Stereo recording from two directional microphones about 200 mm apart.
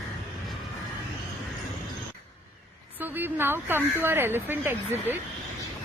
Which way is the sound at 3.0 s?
10° right (ahead or behind).